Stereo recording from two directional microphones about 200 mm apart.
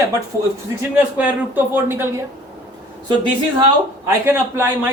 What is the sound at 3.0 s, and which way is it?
A woman's voice, 20° right (ahead or behind).